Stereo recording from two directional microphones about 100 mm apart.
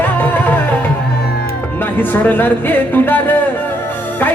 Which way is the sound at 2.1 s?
20° left (ahead or behind).